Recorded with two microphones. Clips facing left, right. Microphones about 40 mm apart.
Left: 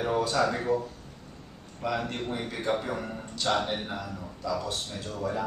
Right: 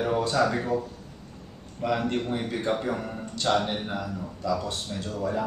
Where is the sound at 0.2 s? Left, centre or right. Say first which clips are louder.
Right 2 dB; centre.